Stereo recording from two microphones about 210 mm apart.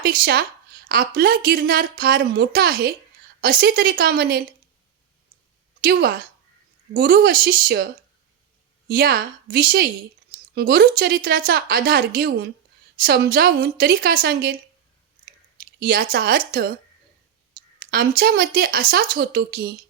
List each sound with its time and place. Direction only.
0.0 s a woman's voice: 45° right (ahead or behind)
5.8 s a woman's voice: 45° right (ahead or behind)
8.9 s a woman's voice: 45° right (ahead or behind)
15.8 s a woman's voice: 45° right (ahead or behind)
17.7 s a woman's voice: 45° right (ahead or behind)